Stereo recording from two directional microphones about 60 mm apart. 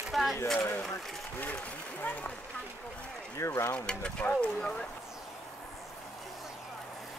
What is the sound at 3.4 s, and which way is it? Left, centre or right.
Speech, left.